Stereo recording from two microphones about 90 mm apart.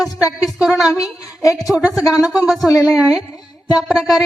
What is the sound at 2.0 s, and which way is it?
Speech, 40° left (ahead or behind).